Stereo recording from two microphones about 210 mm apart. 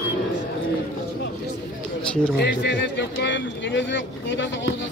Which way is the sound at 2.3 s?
55° left (ahead or behind).